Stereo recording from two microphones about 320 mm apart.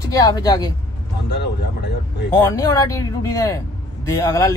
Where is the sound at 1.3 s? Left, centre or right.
Left.